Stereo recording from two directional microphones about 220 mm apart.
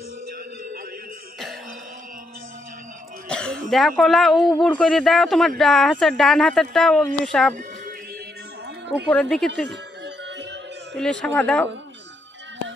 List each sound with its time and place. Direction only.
3.3 s speech: 5° left (ahead or behind)
9.1 s speech: 5° left (ahead or behind)
9.7 s music: 50° right (ahead or behind)
11.0 s speech: 5° left (ahead or behind)